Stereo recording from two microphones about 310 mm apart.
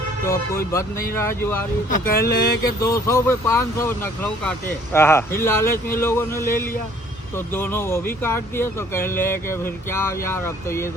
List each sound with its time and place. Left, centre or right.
0.3 s speech: centre
2.0 s a sound: left
2.8 s speech: centre